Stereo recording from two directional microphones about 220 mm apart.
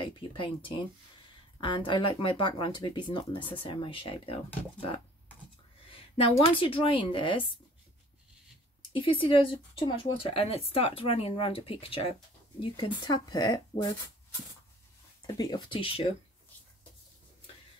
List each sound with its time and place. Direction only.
0.0 s speech: 25° left (ahead or behind)
5.9 s a sound: 25° left (ahead or behind)
6.5 s speech: 25° left (ahead or behind)
8.9 s speech: 25° left (ahead or behind)
15.3 s speech: 20° left (ahead or behind)